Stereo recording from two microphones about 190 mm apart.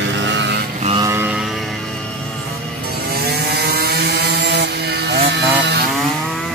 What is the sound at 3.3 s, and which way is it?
Wood, 60° right (ahead or behind).